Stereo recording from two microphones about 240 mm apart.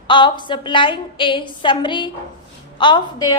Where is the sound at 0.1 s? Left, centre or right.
Centre.